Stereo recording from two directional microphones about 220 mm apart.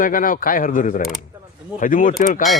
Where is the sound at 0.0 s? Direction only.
40° left (ahead or behind).